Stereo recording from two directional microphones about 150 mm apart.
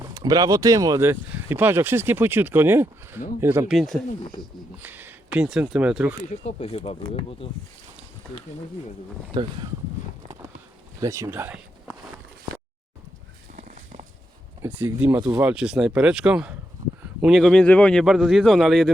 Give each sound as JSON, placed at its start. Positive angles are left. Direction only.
{"t": 0.1, "sound": "speech", "side_deg": -25}
{"t": 3.7, "sound": "a man's voice", "side_deg": 0}
{"t": 4.8, "sound": "speech", "side_deg": -15}
{"t": 6.1, "sound": "speech", "side_deg": 40}
{"t": 9.3, "sound": "speech", "side_deg": -30}
{"t": 11.0, "sound": "speech", "side_deg": -20}
{"t": 14.6, "sound": "a man's voice", "side_deg": -15}